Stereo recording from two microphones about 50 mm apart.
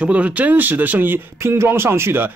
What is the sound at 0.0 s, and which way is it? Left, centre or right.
Speech, right.